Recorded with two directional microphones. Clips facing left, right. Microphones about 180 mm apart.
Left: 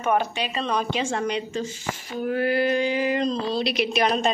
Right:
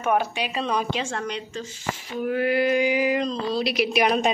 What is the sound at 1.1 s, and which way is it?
Speech, 5° left (ahead or behind).